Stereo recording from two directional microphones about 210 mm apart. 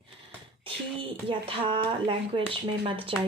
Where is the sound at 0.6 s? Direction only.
25° right (ahead or behind).